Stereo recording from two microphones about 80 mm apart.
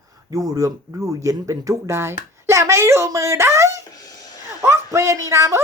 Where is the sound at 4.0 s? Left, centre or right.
Left.